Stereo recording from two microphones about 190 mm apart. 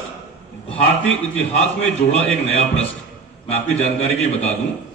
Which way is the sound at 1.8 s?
35° left (ahead or behind).